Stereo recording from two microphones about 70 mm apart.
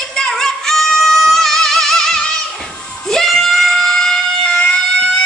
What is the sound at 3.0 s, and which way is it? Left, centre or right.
Screaming, centre.